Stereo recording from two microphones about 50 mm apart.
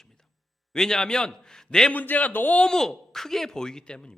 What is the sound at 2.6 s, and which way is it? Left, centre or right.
A man's voice, centre.